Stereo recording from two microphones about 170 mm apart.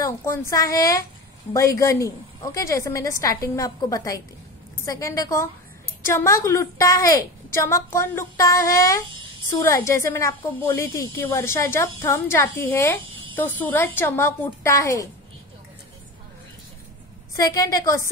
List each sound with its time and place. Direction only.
0.0 s a woman's voice: 15° left (ahead or behind)
17.4 s a woman's voice: 20° left (ahead or behind)